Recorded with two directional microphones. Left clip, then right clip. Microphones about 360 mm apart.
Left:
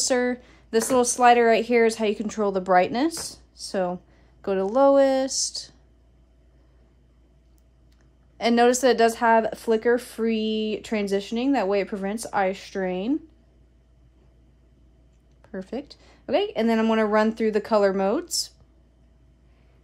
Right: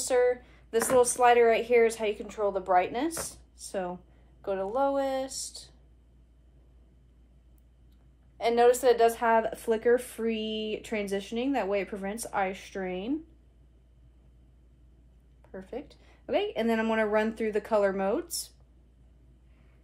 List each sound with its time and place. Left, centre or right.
0.0 s speech: left
8.4 s speech: left
15.5 s speech: left